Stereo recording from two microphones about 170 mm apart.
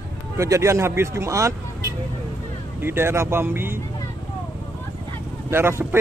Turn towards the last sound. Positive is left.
turn(degrees=-15)  # may be behind; listen again after turning